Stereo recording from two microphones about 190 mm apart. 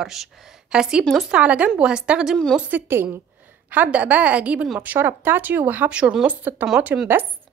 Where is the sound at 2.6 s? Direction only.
10° right (ahead or behind).